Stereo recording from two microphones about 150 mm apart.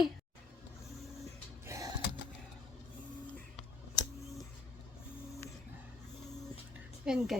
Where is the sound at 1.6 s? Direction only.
20° right (ahead or behind).